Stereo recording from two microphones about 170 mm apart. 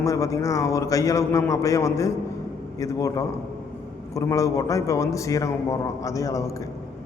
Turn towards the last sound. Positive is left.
turn(degrees=20)  # may be behind; listen again after turning